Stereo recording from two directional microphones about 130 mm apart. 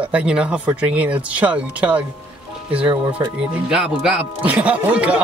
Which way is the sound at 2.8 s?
40° right (ahead or behind).